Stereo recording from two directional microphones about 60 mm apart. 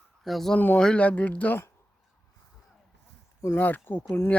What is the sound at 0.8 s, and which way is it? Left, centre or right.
Speech, centre.